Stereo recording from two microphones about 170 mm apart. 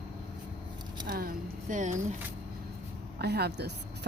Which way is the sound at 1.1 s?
60° right (ahead or behind).